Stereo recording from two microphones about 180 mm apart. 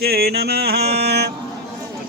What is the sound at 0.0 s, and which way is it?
Mantra, 60° right (ahead or behind).